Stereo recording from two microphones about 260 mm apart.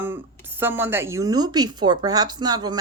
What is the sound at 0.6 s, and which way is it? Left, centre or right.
A woman's voice, centre.